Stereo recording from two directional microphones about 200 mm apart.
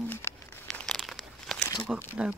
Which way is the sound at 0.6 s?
Centre (ahead or behind).